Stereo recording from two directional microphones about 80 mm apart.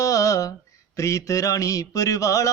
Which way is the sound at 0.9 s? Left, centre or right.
Left.